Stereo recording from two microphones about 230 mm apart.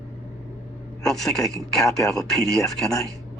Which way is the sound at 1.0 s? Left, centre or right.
Centre.